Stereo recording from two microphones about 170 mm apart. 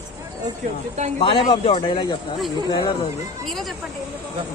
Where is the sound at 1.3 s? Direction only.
30° left (ahead or behind).